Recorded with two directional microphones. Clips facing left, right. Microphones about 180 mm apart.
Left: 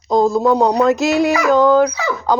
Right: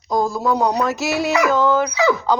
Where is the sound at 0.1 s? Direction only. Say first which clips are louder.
Left 6 dB; 20° left (ahead or behind).